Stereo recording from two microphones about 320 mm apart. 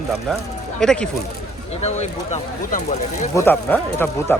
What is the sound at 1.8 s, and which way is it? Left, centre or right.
Speech, left.